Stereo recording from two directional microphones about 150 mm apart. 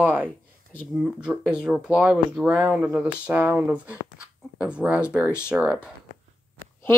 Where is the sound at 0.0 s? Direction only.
10° right (ahead or behind).